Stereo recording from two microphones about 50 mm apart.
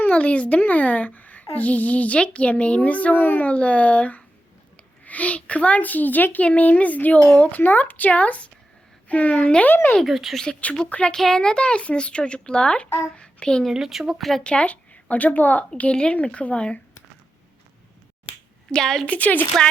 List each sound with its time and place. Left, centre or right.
0.1 s a child's voice: left
7.6 s a child's voice: left
9.6 s speech: left
10.1 s speech: centre
10.3 s a woman's voice: centre
10.8 s speech: left
11.1 s a woman's voice: centre
13.7 s speech: centre
14.1 s speech: centre
14.4 s speech: left
15.8 s speech: left
18.7 s a woman's voice: centre
19.0 s a child's voice: left